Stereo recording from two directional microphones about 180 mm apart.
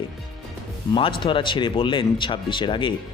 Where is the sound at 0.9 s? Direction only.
30° left (ahead or behind).